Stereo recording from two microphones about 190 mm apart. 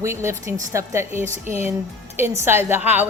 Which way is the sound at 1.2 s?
40° right (ahead or behind).